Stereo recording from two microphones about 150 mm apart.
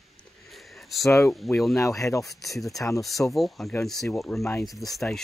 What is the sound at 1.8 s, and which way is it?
Speech, 20° left (ahead or behind).